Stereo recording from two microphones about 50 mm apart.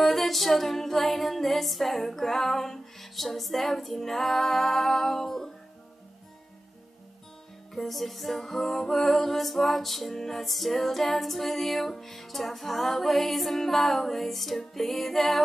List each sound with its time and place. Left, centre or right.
0.0 s music: centre
7.7 s music: centre